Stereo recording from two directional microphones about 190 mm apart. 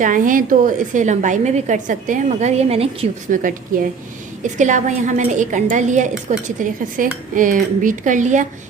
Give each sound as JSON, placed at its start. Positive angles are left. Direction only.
{"t": 0.0, "sound": "a woman's voice", "side_deg": -45}
{"t": 3.7, "sound": "a woman's voice", "side_deg": -45}